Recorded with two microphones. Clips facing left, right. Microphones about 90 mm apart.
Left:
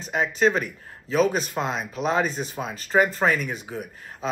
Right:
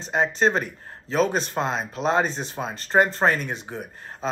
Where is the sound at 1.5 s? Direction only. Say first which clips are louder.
Right 1 dB; 35° right (ahead or behind).